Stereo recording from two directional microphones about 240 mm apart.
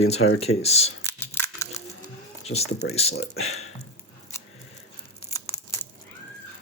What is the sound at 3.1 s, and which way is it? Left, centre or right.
Speech, left.